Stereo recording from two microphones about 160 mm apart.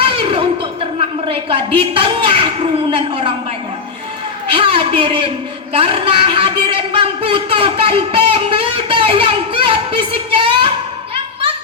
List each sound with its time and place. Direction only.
0.0 s a sound: 35° right (ahead or behind)
2.9 s a man's voice: 35° right (ahead or behind)
4.4 s a woman's voice: 35° right (ahead or behind)